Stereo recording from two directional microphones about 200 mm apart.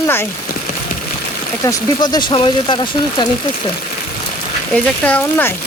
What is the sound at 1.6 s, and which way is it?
Speech, 20° left (ahead or behind).